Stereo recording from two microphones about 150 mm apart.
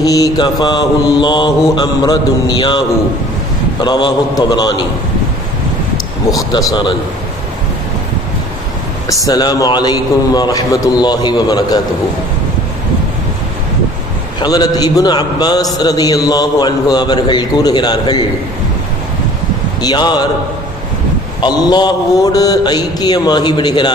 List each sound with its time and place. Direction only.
0.0 s a man's voice: 25° left (ahead or behind)
3.8 s a man's voice: 30° left (ahead or behind)
6.3 s a man's voice: 25° left (ahead or behind)
9.2 s a man's voice: 25° left (ahead or behind)
14.4 s a man's voice: 25° left (ahead or behind)
19.8 s a man's voice: 30° left (ahead or behind)
21.4 s a man's voice: 30° left (ahead or behind)